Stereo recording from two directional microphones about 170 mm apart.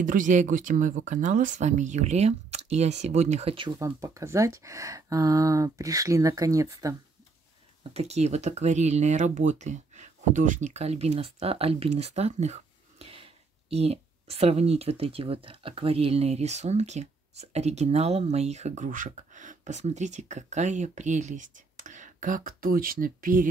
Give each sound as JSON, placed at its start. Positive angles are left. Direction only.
{"t": 0.0, "sound": "speech", "side_deg": -50}
{"t": 3.8, "sound": "speech", "side_deg": -20}
{"t": 7.9, "sound": "speech", "side_deg": -40}